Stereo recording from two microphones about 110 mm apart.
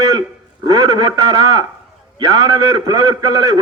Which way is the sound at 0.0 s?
30° right (ahead or behind).